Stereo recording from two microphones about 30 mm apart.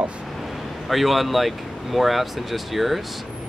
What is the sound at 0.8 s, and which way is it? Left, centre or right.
Speech, centre.